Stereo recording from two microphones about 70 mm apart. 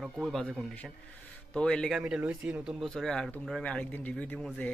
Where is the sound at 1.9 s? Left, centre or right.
Centre.